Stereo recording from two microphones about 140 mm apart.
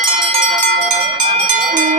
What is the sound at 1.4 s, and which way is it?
Cowbell, 65° right (ahead or behind).